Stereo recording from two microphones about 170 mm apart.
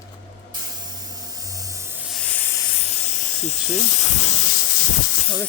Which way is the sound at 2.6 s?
35° left (ahead or behind).